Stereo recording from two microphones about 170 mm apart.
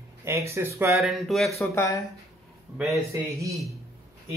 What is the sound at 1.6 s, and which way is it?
Speech, 15° left (ahead or behind).